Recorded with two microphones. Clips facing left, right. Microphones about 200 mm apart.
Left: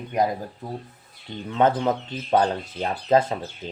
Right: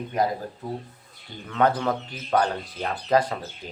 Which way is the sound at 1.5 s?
25° left (ahead or behind).